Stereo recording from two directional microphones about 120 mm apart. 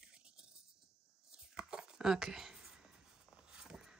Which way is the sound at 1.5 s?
5° right (ahead or behind).